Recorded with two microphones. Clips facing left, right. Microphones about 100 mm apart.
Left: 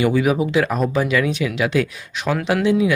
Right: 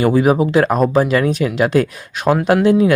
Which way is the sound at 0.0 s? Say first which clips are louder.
Right 4 dB; 40° right (ahead or behind).